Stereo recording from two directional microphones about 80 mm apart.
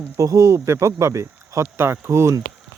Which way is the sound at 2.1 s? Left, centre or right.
Right.